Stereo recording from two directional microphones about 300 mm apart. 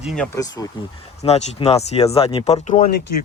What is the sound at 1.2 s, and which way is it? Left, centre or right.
Speech, left.